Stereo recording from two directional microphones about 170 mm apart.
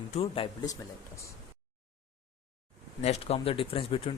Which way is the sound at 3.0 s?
40° left (ahead or behind).